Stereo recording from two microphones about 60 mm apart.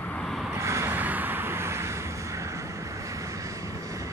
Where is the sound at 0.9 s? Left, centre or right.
Right.